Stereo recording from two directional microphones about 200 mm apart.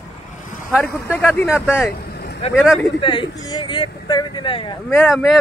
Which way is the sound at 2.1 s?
55° left (ahead or behind).